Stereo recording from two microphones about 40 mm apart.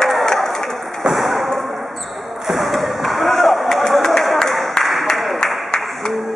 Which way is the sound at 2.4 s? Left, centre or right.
Centre.